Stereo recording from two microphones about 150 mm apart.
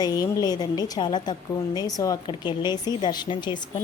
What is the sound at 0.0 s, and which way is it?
A woman's voice, 25° left (ahead or behind).